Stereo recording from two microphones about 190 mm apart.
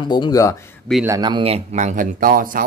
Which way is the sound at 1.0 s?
20° right (ahead or behind).